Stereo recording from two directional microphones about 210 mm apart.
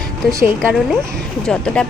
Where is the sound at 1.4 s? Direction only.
5° left (ahead or behind).